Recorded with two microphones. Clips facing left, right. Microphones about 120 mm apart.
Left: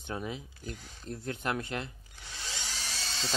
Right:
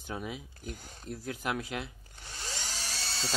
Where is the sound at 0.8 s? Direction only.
45° right (ahead or behind).